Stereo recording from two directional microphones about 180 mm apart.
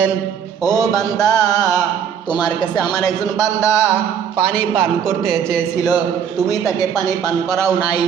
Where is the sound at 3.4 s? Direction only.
15° left (ahead or behind).